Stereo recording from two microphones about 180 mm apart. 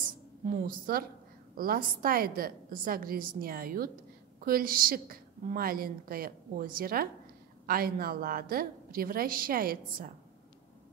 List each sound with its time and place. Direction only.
0.5 s a woman's voice: 50° right (ahead or behind)